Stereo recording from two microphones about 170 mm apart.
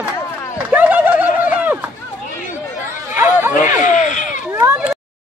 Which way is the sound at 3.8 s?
45° left (ahead or behind).